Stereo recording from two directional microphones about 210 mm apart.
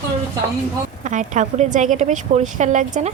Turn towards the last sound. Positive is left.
turn(degrees=-35)  # may be behind; listen again after turning